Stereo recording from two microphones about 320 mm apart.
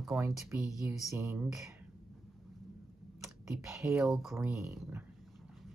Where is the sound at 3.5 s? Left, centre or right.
Centre.